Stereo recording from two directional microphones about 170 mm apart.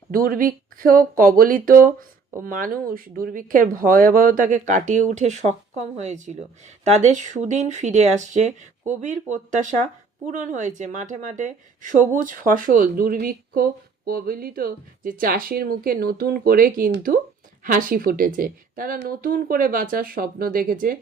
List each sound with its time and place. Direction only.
0.1 s speech: 55° right (ahead or behind)